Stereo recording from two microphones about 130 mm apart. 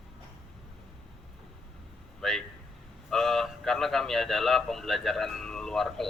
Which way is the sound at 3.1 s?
Centre (ahead or behind).